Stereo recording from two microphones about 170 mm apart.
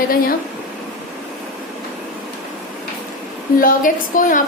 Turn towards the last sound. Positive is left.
turn(degrees=50)  # may be behind; listen again after turning